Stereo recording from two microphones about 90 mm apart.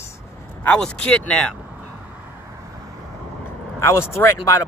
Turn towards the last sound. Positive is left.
turn(degrees=30)  # may be behind; listen again after turning